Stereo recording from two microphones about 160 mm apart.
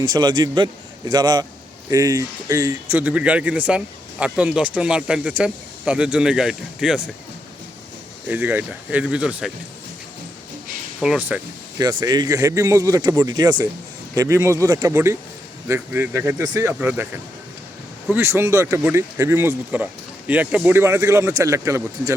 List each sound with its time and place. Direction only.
0.0 s speech: 25° right (ahead or behind); by 7.1 s 5° right (ahead or behind)
8.3 s speech: 10° right (ahead or behind)
11.0 s speech: 10° right (ahead or behind)
11.8 s speech: 25° right (ahead or behind)
18.1 s speech: 15° right (ahead or behind)